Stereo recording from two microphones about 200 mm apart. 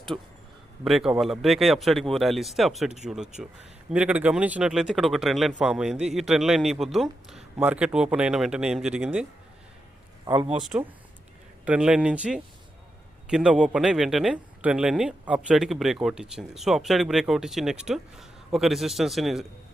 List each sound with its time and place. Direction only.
0.1 s a man's voice: 10° right (ahead or behind)
10.2 s speech: 25° right (ahead or behind)
10.6 s speech: 5° right (ahead or behind)